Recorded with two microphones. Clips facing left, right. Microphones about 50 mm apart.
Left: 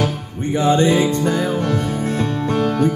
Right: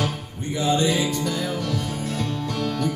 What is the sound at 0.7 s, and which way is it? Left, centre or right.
Music, left.